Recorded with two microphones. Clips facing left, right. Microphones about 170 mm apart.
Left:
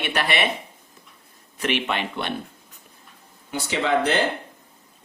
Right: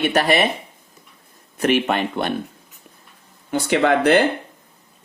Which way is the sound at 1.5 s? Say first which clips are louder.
Right 6 dB; 45° right (ahead or behind).